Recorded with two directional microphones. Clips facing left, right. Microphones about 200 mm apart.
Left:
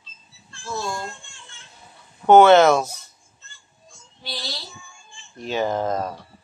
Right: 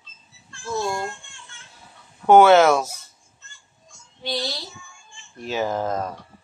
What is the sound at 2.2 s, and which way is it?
Speech, 5° right (ahead or behind).